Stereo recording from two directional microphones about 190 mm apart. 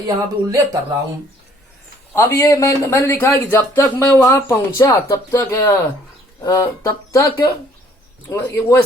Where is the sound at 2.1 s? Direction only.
15° left (ahead or behind).